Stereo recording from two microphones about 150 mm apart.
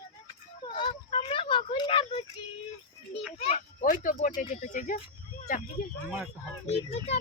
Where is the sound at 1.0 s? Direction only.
40° left (ahead or behind).